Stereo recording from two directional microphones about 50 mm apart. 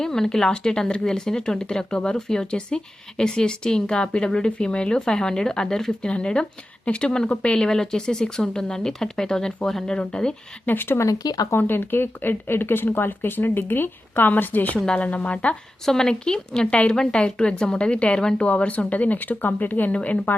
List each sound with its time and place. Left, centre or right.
0.0 s speech: centre
9.9 s speech: centre
10.7 s speech: left
14.9 s a woman's voice: left
15.9 s a woman's voice: centre; by 19.9 s left
19.9 s a woman's voice: left